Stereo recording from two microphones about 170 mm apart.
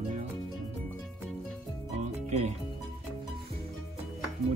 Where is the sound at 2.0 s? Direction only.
40° right (ahead or behind).